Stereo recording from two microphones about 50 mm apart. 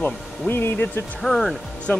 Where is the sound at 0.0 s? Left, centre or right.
Left.